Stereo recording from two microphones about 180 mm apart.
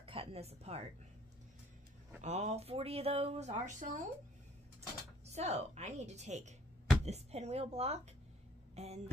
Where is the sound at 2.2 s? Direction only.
40° right (ahead or behind).